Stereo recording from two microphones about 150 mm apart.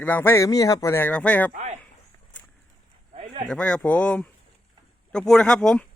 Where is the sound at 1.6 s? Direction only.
50° right (ahead or behind).